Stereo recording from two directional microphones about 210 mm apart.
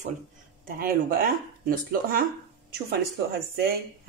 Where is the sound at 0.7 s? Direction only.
45° right (ahead or behind).